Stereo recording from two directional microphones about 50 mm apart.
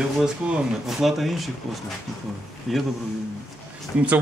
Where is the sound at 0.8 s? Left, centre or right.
Centre.